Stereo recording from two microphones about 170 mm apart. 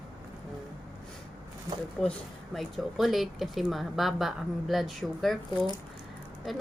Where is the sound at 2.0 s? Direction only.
5° left (ahead or behind).